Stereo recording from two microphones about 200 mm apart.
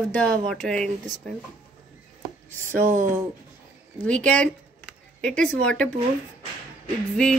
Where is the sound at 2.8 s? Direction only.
40° right (ahead or behind).